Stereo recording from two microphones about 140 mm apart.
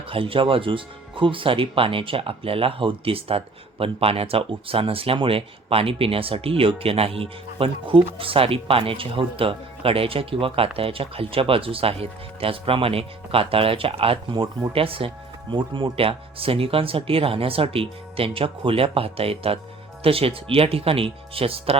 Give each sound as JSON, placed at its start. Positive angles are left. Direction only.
{"t": 0.1, "sound": "speech", "side_deg": -40}